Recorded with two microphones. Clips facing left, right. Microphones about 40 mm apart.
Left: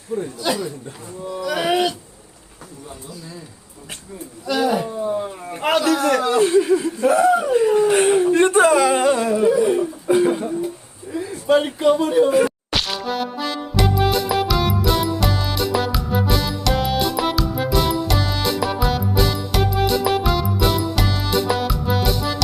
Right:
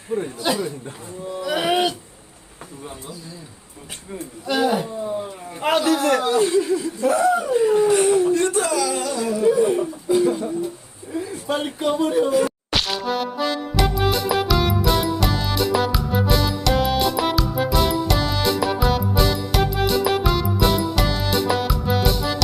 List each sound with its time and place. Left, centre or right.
0.1 s speech: right
4.4 s a man's voice: right
5.0 s speech: left
6.0 s speech: centre
6.2 s speech: left
7.1 s speech: left
7.9 s speech: left
11.1 s a sound: left
11.8 s speech: left
12.5 s music: centre